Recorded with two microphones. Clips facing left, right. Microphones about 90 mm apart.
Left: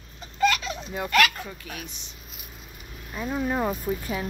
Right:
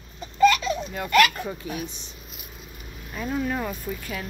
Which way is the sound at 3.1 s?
10° left (ahead or behind).